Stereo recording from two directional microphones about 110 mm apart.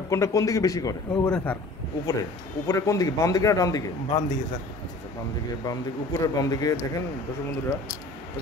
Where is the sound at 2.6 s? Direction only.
30° left (ahead or behind).